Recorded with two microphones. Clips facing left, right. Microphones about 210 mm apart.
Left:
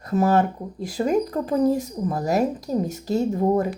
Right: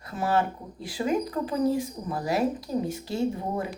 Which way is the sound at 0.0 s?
45° left (ahead or behind).